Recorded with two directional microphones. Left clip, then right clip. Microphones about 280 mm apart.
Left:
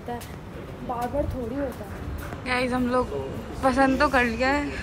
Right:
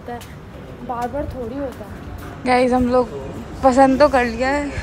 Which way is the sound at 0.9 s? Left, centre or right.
Centre.